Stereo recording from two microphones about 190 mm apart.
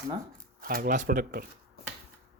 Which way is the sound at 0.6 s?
50° right (ahead or behind).